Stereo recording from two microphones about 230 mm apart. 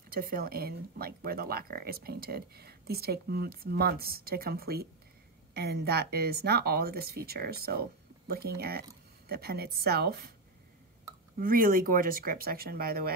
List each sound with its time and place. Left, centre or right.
0.1 s speech: right
11.3 s speech: right